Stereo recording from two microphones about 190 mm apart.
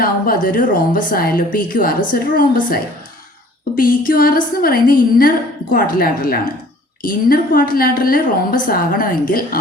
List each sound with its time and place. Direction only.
0.4 s a woman's voice: 45° left (ahead or behind)
3.8 s a woman's voice: 50° left (ahead or behind)